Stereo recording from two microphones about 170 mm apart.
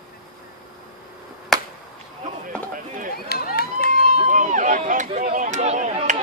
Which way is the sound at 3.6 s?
65° left (ahead or behind).